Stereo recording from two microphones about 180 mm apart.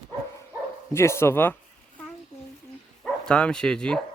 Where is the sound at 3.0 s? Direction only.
5° left (ahead or behind).